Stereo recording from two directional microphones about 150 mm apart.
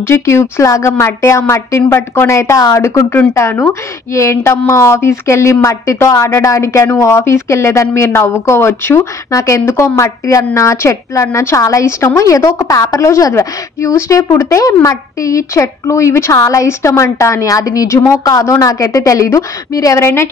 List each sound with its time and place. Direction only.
0.0 s speech: 15° left (ahead or behind)